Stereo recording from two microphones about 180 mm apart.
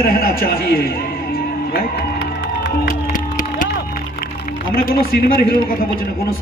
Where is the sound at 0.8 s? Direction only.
55° left (ahead or behind).